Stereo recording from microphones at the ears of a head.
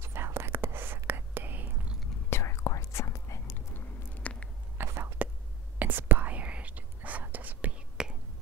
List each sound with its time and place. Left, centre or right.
0.0 s whispering: right
2.0 s whispering: left
4.7 s whispering: right